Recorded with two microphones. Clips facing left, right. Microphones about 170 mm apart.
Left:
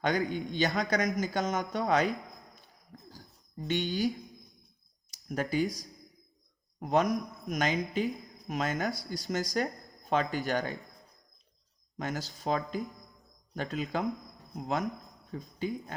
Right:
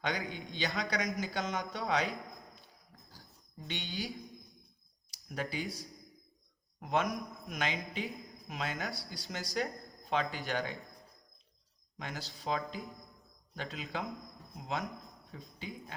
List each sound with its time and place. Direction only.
0.0 s speech: 45° left (ahead or behind)
3.6 s speech: 45° left (ahead or behind)
5.3 s a man's voice: 45° left (ahead or behind)
8.0 s a sound: centre (ahead or behind)
8.4 s speech: 45° left (ahead or behind)
11.9 s speech: 45° left (ahead or behind)